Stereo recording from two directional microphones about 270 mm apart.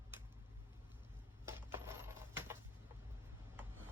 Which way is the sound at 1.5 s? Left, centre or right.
Centre.